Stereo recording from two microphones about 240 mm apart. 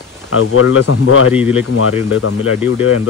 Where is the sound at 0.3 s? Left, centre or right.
Left.